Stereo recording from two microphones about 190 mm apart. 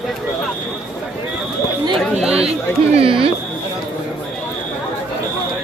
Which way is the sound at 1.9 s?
Centre (ahead or behind).